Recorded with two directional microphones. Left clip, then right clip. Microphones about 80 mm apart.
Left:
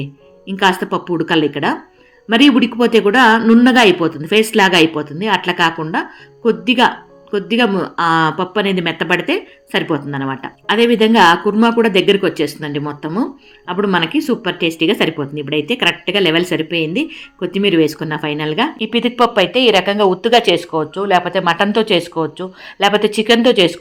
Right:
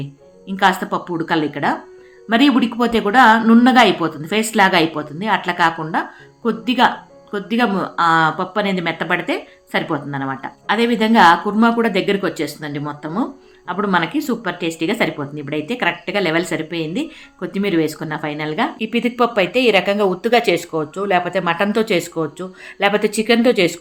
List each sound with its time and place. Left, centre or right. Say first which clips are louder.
0.0 s speech: left 4 dB; left
3.6 s speech: left 2 dB; left
11.5 s speech: left 2 dB; left
11.8 s speech: left 5 dB; left
18.8 s speech: left 4 dB; centre